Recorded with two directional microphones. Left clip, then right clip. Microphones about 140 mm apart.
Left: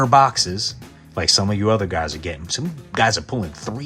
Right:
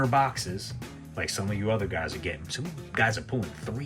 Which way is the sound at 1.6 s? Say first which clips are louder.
Left 5 dB; 50° left (ahead or behind).